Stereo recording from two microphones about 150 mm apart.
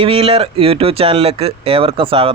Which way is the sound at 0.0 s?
35° right (ahead or behind).